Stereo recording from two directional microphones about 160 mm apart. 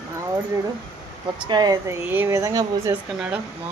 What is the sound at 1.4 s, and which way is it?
A woman's voice, 25° right (ahead or behind).